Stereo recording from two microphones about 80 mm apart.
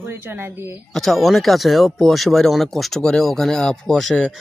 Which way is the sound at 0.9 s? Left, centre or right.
Centre.